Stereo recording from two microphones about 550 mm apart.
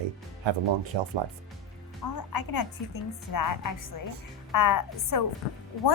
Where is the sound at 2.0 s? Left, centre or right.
Left.